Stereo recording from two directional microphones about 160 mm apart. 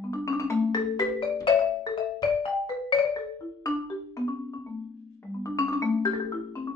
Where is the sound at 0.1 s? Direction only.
20° left (ahead or behind).